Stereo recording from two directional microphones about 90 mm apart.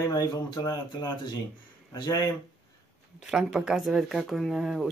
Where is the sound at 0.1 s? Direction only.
45° left (ahead or behind).